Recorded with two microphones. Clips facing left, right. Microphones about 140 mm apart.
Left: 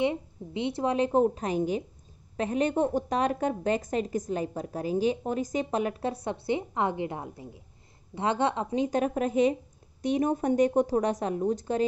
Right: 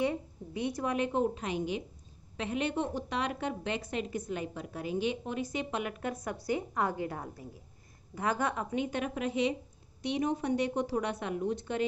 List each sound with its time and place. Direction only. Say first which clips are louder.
0.0 s a woman's voice: left 4 dB; 20° left (ahead or behind); by 11.8 s 40° left (ahead or behind)